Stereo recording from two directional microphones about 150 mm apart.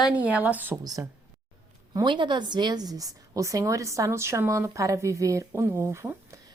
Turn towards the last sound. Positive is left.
turn(degrees=-20)  # may be behind; listen again after turning